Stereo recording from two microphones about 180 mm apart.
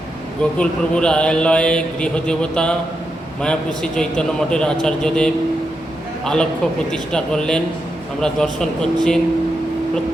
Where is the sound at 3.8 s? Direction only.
5° left (ahead or behind).